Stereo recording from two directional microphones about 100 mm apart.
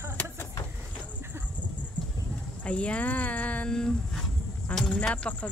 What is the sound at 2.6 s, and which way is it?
Speech, 10° left (ahead or behind).